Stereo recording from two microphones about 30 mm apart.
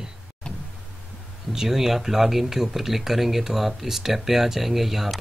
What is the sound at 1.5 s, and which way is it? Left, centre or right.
Speech, centre.